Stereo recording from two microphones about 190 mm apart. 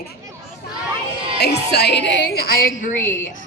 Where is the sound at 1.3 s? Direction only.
60° left (ahead or behind).